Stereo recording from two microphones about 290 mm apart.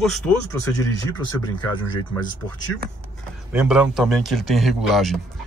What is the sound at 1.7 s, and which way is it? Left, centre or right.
Speech, centre.